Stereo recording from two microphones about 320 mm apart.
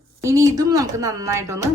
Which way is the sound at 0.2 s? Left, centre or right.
Centre.